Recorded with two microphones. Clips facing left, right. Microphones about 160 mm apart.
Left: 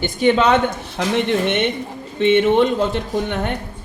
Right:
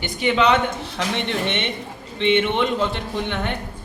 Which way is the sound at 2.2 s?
45° left (ahead or behind).